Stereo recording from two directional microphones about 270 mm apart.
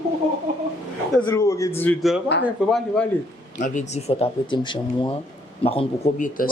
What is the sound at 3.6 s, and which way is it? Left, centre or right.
Speech, left.